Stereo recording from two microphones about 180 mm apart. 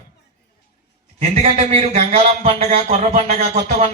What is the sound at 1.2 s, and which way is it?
Speech, 40° right (ahead or behind).